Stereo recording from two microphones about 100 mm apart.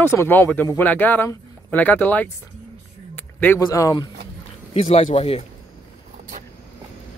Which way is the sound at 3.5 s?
35° left (ahead or behind).